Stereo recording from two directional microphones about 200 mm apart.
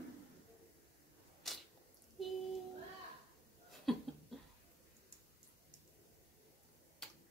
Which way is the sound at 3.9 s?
Centre (ahead or behind).